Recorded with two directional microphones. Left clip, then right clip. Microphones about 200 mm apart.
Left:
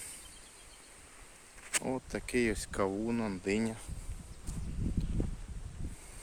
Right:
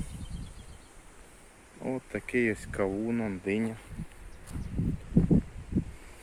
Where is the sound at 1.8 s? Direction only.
15° left (ahead or behind).